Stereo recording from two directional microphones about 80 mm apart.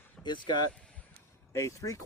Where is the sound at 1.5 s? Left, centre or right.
Left.